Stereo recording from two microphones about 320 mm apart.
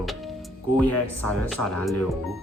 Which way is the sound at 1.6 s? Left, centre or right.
Left.